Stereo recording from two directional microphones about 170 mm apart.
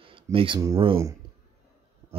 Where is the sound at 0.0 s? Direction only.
30° right (ahead or behind).